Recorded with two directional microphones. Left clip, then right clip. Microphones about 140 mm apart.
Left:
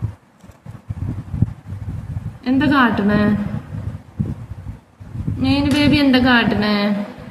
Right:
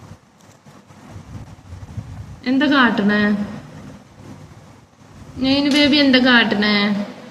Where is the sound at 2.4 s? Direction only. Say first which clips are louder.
Even; 15° left (ahead or behind).